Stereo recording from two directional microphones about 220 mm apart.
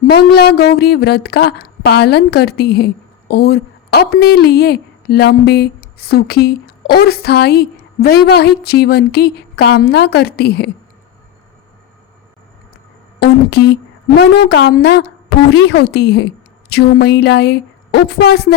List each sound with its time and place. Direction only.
0.1 s speech: 50° left (ahead or behind)
13.1 s speech: 50° left (ahead or behind)